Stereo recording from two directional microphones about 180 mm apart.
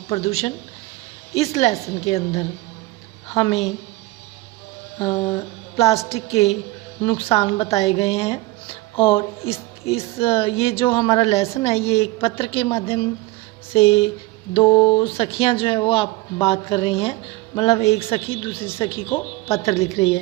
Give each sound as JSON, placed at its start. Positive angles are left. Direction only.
{"t": 0.1, "sound": "speech", "side_deg": 35}
{"t": 5.2, "sound": "speech", "side_deg": 30}
{"t": 7.0, "sound": "speech", "side_deg": 25}